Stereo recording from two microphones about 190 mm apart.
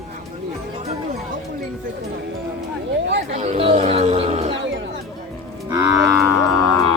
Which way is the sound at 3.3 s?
35° right (ahead or behind).